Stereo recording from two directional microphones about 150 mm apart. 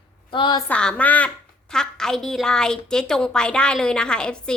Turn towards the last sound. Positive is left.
turn(degrees=5)  # may be behind; listen again after turning